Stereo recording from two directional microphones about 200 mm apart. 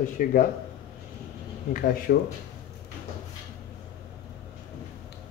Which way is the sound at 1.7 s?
45° left (ahead or behind).